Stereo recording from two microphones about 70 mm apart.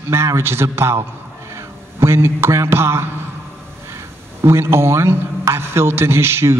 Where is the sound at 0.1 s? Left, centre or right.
Right.